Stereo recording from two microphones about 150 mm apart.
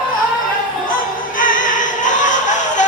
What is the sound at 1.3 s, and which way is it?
Music, 60° left (ahead or behind).